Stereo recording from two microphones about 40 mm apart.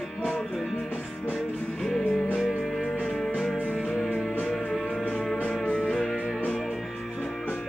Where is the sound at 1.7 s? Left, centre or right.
Centre.